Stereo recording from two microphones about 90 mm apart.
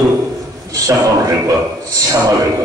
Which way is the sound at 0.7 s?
40° right (ahead or behind).